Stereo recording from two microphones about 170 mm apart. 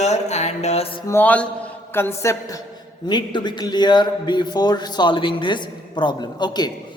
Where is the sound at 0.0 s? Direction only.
40° left (ahead or behind).